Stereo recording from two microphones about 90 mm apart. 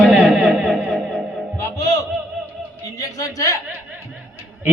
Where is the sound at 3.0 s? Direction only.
40° left (ahead or behind).